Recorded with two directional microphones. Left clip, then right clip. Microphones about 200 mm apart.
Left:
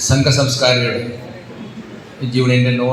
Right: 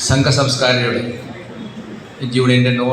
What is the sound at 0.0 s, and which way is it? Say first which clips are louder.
Speech: even; 45° left (ahead or behind).